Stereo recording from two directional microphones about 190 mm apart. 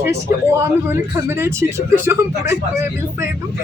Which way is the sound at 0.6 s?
15° right (ahead or behind).